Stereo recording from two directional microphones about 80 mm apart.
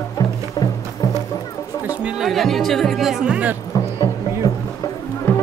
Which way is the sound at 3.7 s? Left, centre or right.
Left.